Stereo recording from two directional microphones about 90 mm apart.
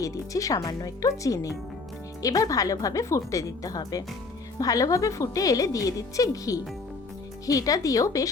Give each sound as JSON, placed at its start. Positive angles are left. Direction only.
{"t": 0.0, "sound": "a woman's voice", "side_deg": 40}